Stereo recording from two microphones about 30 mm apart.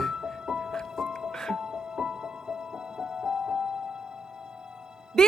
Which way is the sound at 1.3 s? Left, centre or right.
Centre.